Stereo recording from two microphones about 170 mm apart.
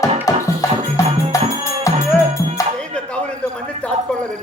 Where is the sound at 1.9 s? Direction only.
20° left (ahead or behind).